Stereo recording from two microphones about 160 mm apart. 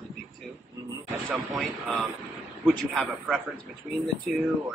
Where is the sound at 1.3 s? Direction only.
Centre (ahead or behind).